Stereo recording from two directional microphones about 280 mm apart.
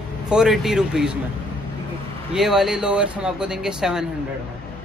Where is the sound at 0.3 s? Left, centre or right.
Centre.